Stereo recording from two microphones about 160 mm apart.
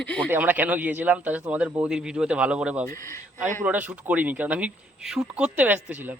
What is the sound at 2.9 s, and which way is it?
Speech, 20° left (ahead or behind).